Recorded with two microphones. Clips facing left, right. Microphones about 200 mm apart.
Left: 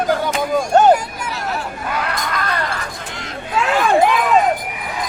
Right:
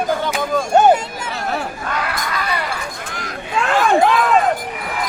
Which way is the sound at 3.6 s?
5° left (ahead or behind).